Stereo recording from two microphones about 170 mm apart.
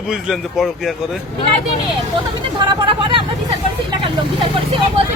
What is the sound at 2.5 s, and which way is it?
Speech, 30° right (ahead or behind).